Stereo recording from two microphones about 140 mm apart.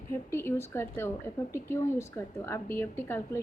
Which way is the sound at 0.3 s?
15° left (ahead or behind).